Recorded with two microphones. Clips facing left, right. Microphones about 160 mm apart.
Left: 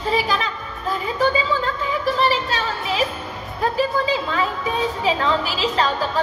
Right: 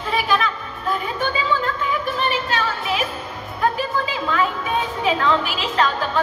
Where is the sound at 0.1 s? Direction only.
35° left (ahead or behind).